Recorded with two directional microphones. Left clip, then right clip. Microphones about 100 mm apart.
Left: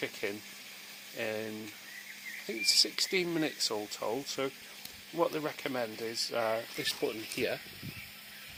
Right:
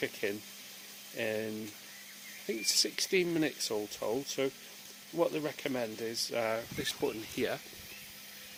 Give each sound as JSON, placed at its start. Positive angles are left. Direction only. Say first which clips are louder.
{"t": 0.0, "sound": "speech", "louder": "right 1 dB", "side_deg": -40}